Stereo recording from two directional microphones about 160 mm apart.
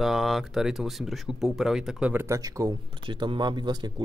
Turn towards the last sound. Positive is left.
turn(degrees=-25)  # may be behind; listen again after turning